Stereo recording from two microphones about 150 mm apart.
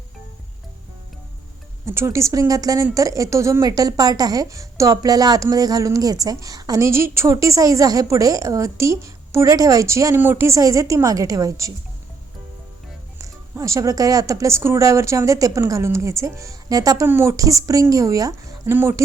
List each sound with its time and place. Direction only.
1.8 s speech: 20° right (ahead or behind)
13.1 s speech: 20° right (ahead or behind)